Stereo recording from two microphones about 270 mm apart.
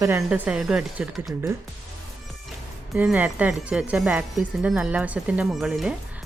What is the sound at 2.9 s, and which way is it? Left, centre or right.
Speech, centre.